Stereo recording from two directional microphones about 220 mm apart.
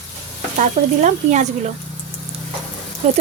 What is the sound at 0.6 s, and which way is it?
Speech, 35° right (ahead or behind).